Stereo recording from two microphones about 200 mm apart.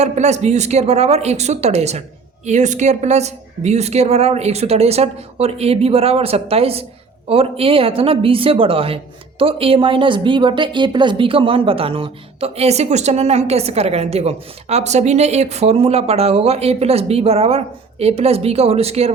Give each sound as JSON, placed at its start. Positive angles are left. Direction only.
{"t": 0.0, "sound": "speech", "side_deg": -35}